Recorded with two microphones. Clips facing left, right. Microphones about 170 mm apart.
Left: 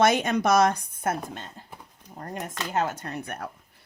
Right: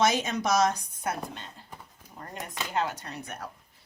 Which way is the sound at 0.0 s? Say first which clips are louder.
Left 4 dB; 55° left (ahead or behind).